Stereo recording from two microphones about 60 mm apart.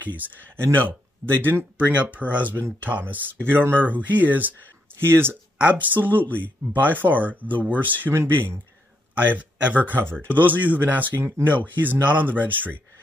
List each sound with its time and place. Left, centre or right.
0.7 s speech: right
1.8 s speech: right
2.5 s speech: right
5.6 s speech: right
9.1 s speech: right